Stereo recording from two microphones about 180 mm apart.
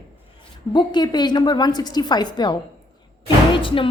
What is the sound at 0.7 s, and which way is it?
A woman's voice, 25° left (ahead or behind).